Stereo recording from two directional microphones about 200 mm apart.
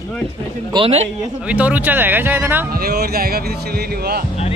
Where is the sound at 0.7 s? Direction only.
30° right (ahead or behind).